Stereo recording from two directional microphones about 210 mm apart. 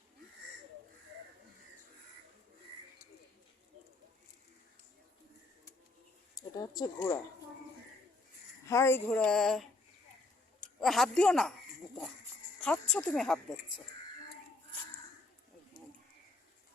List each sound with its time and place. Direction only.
6.3 s speech: 20° left (ahead or behind)
8.6 s speech: 15° left (ahead or behind)
10.8 s speech: centre (ahead or behind)
12.6 s speech: 5° left (ahead or behind)